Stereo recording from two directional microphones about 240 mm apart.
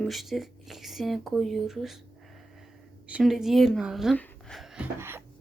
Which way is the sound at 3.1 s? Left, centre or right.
Centre.